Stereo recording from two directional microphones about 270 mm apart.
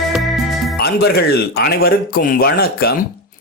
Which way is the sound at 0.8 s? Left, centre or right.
Left.